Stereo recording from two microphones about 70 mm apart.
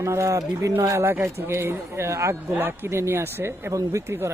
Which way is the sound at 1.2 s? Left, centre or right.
Right.